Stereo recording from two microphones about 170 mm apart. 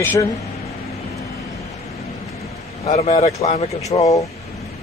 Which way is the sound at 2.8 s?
40° left (ahead or behind).